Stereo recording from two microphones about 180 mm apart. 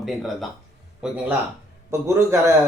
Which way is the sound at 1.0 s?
5° right (ahead or behind).